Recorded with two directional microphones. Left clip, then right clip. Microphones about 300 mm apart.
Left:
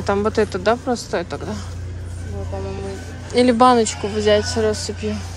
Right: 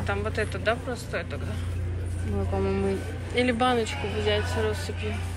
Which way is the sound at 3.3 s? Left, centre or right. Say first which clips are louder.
Left 11 dB; centre.